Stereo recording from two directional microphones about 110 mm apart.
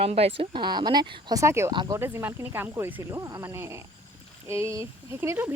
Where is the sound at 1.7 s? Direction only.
40° right (ahead or behind).